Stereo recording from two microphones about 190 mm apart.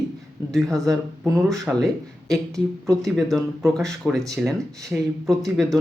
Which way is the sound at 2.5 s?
Centre (ahead or behind).